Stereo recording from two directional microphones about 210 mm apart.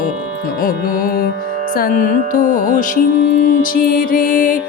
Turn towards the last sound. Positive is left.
turn(degrees=40)  # may be behind; listen again after turning